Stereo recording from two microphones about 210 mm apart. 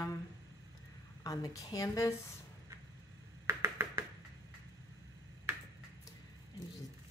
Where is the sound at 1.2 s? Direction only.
15° left (ahead or behind).